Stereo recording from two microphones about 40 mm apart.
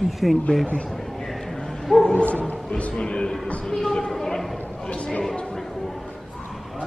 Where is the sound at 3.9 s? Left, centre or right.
Centre.